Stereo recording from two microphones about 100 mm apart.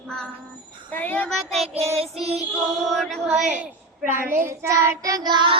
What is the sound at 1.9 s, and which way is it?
Child singing, 90° right.